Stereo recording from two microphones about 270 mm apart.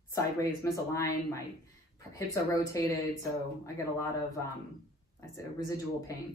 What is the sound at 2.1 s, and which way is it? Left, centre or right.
Speech, centre.